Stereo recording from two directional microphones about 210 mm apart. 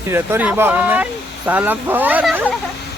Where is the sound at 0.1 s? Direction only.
10° right (ahead or behind).